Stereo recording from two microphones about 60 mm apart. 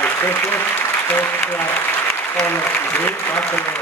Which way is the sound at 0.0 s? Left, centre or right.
Left.